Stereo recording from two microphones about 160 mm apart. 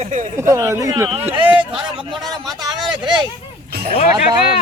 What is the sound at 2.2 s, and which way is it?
Speech, 25° right (ahead or behind).